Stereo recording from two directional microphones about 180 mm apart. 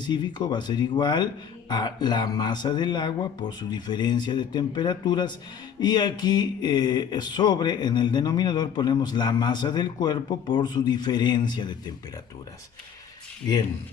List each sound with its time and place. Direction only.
0.0 s speech: 25° left (ahead or behind)